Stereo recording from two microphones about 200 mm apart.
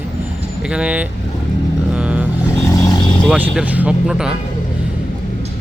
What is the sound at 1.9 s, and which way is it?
Vehicle, 5° right (ahead or behind).